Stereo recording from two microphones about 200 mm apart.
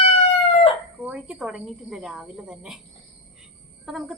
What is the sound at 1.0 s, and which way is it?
A woman's voice, 5° right (ahead or behind).